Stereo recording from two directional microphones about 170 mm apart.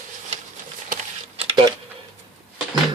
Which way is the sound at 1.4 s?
30° right (ahead or behind).